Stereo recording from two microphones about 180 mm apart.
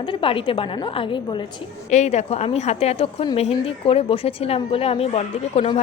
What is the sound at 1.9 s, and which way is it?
A woman's voice, 40° left (ahead or behind).